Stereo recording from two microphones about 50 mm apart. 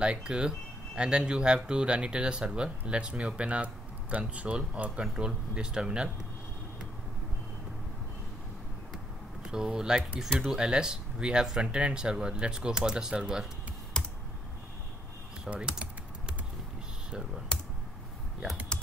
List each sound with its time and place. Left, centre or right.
0.0 s speech: centre
9.4 s speech: centre
14.0 s computer keyboard: centre
15.5 s speech: centre
17.5 s computer keyboard: centre